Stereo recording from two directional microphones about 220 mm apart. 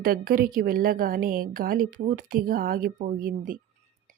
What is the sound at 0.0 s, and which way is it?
A woman's voice, 40° right (ahead or behind).